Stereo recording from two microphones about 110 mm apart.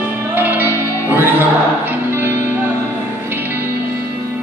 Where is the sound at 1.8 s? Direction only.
20° right (ahead or behind).